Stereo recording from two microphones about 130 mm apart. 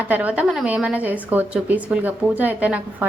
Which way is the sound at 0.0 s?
15° right (ahead or behind).